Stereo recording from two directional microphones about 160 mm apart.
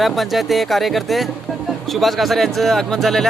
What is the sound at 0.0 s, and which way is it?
Speech, centre (ahead or behind).